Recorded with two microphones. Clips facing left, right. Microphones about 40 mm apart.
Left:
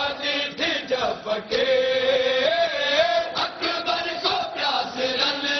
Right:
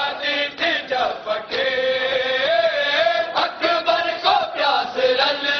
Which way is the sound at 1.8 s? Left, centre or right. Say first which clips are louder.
Right 1 dB; centre.